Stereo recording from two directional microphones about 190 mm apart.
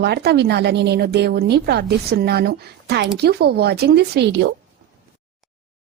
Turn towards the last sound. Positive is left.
turn(degrees=-65)  # may be behind; listen again after turning